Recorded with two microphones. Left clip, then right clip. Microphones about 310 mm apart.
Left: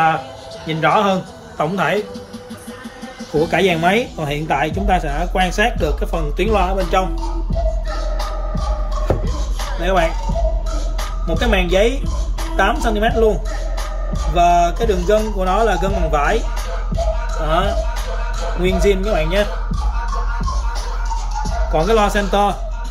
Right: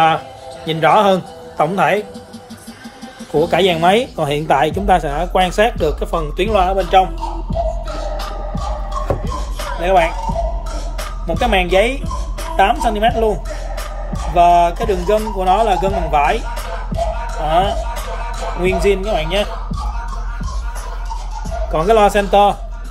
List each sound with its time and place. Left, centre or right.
0.7 s a man's voice: right
3.3 s speech: centre
7.5 s music: centre
11.0 s speech: centre
21.4 s speech: centre